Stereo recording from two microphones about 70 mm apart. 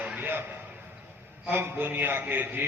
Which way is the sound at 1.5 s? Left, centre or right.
Right.